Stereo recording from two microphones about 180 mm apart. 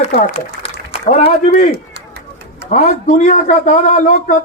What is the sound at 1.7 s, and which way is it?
Run, 70° right (ahead or behind).